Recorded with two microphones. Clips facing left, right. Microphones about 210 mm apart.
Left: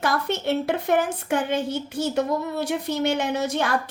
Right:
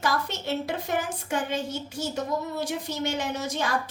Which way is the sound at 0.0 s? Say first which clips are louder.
Left 4 dB; 60° left (ahead or behind).